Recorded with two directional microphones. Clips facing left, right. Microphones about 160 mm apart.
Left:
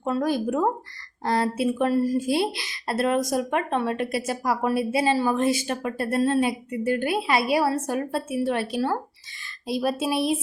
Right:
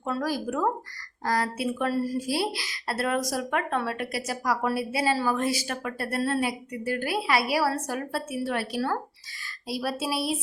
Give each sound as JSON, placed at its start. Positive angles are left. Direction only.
{"t": 0.0, "sound": "a woman's voice", "side_deg": 25}